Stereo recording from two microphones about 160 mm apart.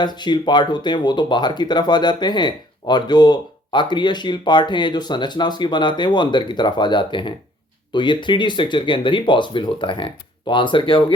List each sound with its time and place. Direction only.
0.0 s speech: 30° left (ahead or behind)